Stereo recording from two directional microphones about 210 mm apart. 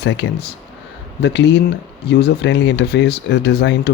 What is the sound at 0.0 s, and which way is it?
Speech, 55° left (ahead or behind).